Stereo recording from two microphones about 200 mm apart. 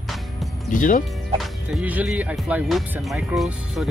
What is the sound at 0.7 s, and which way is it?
Speech, 40° left (ahead or behind).